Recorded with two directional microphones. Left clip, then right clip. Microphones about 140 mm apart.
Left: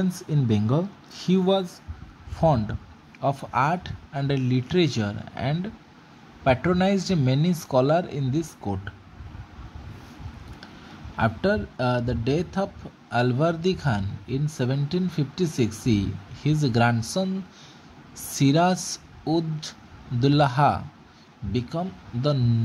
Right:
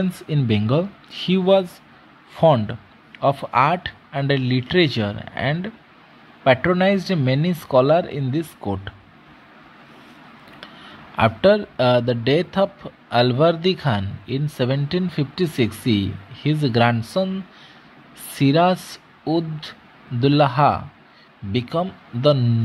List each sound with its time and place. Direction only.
0.3 s a man's voice: 15° right (ahead or behind)
11.1 s a man's voice: 20° right (ahead or behind)
18.3 s speech: 5° right (ahead or behind)
21.5 s a man's voice: 15° right (ahead or behind)